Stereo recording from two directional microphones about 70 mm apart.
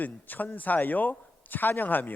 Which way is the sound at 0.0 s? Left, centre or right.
Left.